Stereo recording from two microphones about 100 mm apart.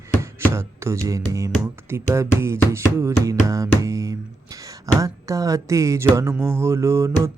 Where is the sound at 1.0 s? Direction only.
30° right (ahead or behind).